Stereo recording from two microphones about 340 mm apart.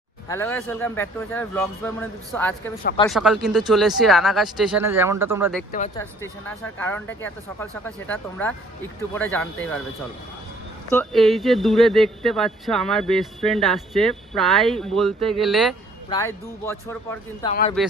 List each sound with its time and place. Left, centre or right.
0.3 s speech: centre
2.8 s speech: centre
3.1 s speech: centre
6.7 s speech: centre
10.9 s speech: centre
17.5 s a man's voice: left